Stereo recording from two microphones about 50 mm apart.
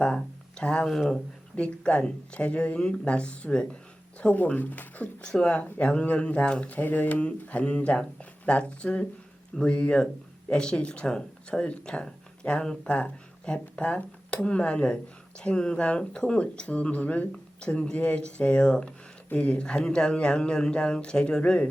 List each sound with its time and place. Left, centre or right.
0.0 s speech: centre
0.9 s speech: centre
1.5 s speech: left
5.2 s speech: centre
6.7 s speech: left; by 21.7 s centre